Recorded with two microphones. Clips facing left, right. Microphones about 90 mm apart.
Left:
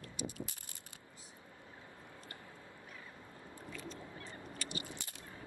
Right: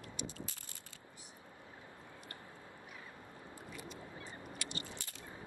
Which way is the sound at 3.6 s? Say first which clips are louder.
Left 3 dB; 15° right (ahead or behind).